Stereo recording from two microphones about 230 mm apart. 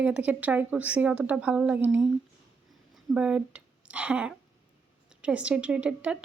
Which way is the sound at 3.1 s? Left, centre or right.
Centre.